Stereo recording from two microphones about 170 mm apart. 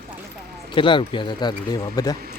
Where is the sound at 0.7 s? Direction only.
30° left (ahead or behind).